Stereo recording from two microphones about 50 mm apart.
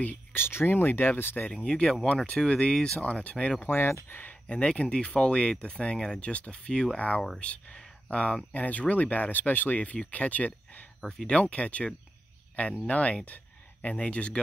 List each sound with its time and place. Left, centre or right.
0.0 s speech: left
1.6 s speech: left
3.0 s speech: left
3.6 s speech: left
4.1 s speech: left
4.5 s speech: left
11.0 s speech: centre
11.3 s speech: left